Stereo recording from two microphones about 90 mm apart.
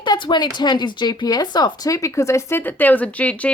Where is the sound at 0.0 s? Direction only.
60° left (ahead or behind).